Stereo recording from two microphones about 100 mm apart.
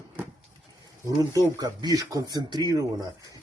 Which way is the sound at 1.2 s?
40° right (ahead or behind).